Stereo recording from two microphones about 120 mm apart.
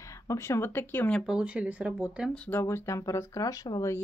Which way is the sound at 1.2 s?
5° right (ahead or behind).